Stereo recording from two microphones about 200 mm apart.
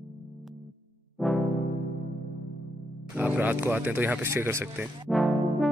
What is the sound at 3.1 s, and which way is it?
Speech, 10° right (ahead or behind).